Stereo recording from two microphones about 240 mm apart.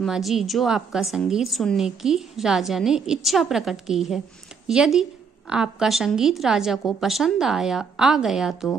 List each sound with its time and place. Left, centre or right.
0.0 s a woman's voice: centre